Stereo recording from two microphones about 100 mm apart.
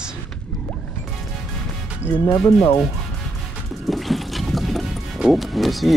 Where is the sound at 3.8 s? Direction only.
Centre (ahead or behind).